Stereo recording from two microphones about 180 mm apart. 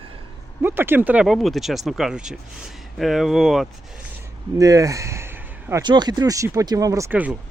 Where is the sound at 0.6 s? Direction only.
10° right (ahead or behind).